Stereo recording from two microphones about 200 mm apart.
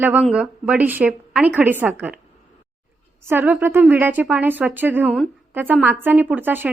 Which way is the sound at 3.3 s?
10° right (ahead or behind).